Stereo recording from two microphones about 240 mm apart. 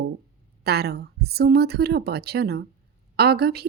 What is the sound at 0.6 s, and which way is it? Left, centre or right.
A woman's voice, right.